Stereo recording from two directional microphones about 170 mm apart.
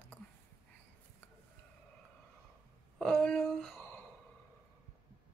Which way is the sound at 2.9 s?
5° left (ahead or behind).